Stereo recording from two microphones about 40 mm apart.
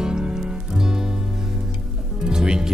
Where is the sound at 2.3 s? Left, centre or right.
Centre.